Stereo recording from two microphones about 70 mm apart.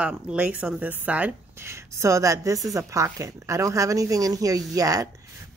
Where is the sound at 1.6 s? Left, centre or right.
Right.